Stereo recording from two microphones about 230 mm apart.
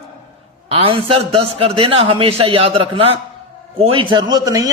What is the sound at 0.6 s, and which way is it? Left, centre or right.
A man's voice, right.